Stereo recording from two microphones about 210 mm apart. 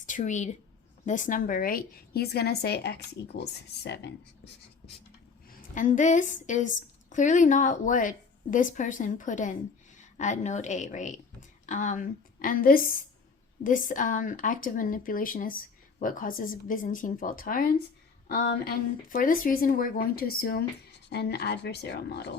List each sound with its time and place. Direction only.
0.0 s a woman's voice: 35° left (ahead or behind); by 4.1 s 55° left (ahead or behind)
5.5 s a woman's voice: 40° left (ahead or behind)